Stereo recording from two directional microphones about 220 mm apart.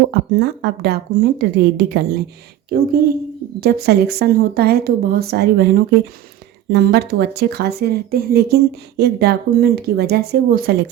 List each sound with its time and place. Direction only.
0.1 s speech: 50° right (ahead or behind)